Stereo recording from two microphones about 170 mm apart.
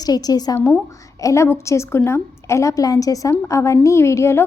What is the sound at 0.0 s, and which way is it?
A woman's voice, 25° left (ahead or behind).